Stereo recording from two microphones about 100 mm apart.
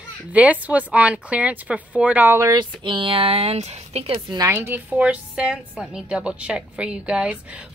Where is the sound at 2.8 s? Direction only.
55° right (ahead or behind); by 4.2 s 85° right.